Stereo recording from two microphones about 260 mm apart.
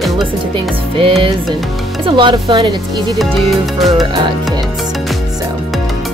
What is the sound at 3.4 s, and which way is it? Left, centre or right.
Music, centre.